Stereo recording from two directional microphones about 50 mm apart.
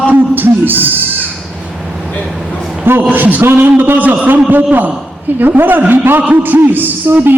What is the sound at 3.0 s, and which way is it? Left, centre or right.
A man's voice, right.